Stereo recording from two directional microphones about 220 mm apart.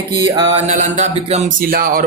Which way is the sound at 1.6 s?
40° right (ahead or behind).